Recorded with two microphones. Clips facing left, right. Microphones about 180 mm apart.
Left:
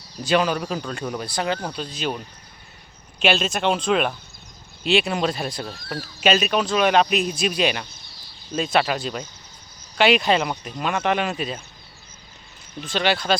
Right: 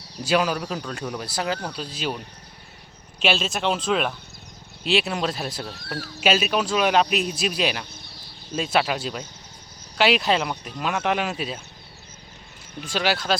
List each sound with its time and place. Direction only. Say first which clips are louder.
0.2 s speech: left 2 dB; 5° right (ahead or behind)
0.6 s speech: left 2 dB; 5° left (ahead or behind)
8.0 s chicken: right 4 dB; 60° right (ahead or behind)
8.5 s speech: left 2 dB; 5° right (ahead or behind)
12.8 s speech: left 2 dB; 5° right (ahead or behind)